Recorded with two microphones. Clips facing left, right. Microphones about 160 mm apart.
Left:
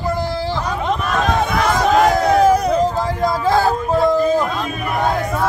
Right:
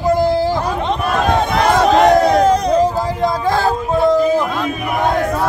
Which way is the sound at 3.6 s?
5° left (ahead or behind).